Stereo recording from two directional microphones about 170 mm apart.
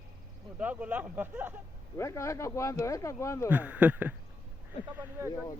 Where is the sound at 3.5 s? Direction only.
10° right (ahead or behind).